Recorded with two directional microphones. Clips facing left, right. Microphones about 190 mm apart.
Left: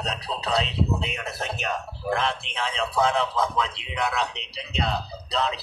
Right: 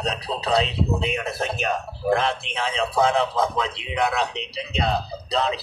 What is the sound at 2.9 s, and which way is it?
Speech, 45° right (ahead or behind).